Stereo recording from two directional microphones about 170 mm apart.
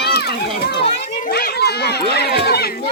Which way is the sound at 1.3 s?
70° left (ahead or behind).